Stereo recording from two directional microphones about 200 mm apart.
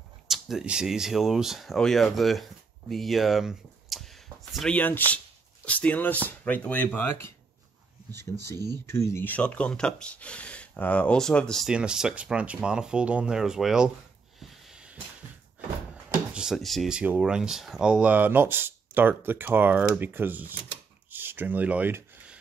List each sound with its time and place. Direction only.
0.3 s speech: centre (ahead or behind)
8.1 s speech: 55° right (ahead or behind)
8.8 s speech: 15° left (ahead or behind)
14.7 s a sound: 5° right (ahead or behind)
16.3 s speech: centre (ahead or behind)
21.1 s a sound: 10° right (ahead or behind)